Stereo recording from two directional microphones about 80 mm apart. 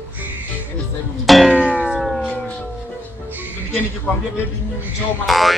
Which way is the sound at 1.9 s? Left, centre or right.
Centre.